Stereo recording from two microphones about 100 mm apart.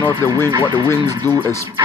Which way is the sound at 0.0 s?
30° left (ahead or behind).